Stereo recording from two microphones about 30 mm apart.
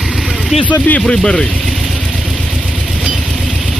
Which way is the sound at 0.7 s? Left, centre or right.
Left.